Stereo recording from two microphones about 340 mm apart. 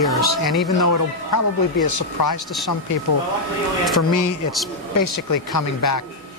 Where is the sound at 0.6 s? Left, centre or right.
Left.